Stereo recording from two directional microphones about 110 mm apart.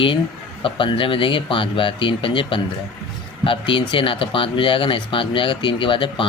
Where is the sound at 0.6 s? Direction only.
50° left (ahead or behind).